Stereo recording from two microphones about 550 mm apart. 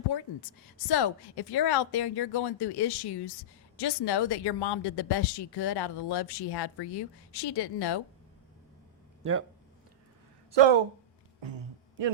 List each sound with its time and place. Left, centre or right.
0.1 s a woman's voice: left
10.5 s a woman's voice: right
11.3 s a sound: right